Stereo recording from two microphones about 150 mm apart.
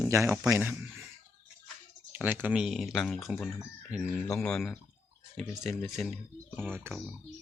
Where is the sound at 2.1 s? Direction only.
15° right (ahead or behind); by 6.1 s 5° left (ahead or behind).